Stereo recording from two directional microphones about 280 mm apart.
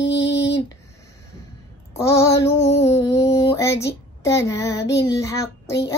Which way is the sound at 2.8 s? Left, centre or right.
Centre.